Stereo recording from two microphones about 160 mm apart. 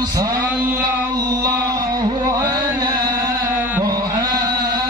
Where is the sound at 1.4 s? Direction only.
25° right (ahead or behind).